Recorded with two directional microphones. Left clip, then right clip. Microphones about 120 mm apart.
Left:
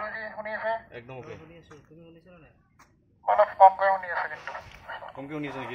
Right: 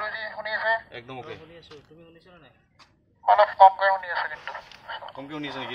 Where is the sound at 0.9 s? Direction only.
20° right (ahead or behind).